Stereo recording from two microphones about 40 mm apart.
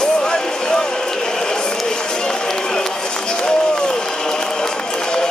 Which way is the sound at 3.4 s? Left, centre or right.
Centre.